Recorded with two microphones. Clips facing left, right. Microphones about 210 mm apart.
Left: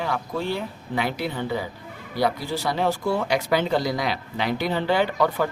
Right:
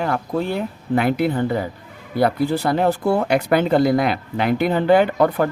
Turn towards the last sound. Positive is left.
turn(degrees=-55)  # may be behind; listen again after turning